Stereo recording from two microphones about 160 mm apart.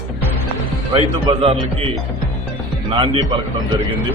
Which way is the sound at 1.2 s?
35° right (ahead or behind).